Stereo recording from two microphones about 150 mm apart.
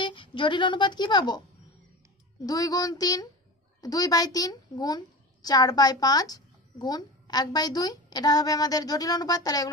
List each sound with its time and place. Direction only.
0.0 s speech: 35° left (ahead or behind)
2.4 s a child's voice: 25° left (ahead or behind)